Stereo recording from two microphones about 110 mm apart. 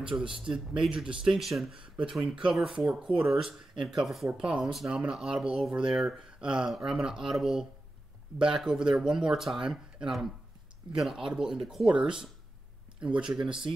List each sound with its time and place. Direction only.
0.1 s speech: 5° right (ahead or behind)
0.9 s speech: 50° right (ahead or behind)
1.2 s speech: centre (ahead or behind)